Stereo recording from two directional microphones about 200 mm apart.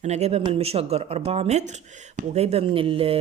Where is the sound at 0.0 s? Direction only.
35° right (ahead or behind).